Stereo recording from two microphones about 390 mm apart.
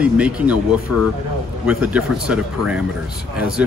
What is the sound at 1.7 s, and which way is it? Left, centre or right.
Speech, centre.